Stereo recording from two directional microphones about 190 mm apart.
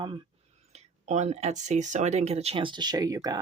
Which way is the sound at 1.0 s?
40° right (ahead or behind).